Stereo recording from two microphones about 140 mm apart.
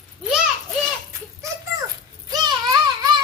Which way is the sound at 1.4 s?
20° right (ahead or behind).